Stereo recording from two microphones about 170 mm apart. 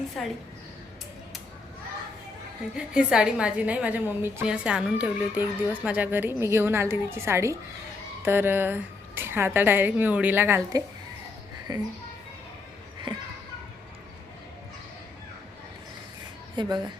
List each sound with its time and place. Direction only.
0.2 s a woman's voice: centre (ahead or behind)
2.7 s a woman's voice: 5° right (ahead or behind); by 11.8 s 25° right (ahead or behind)
16.6 s a woman's voice: 25° right (ahead or behind)